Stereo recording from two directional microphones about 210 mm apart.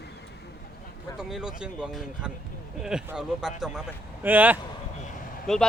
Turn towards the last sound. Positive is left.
turn(degrees=0)  # may be behind; listen again after turning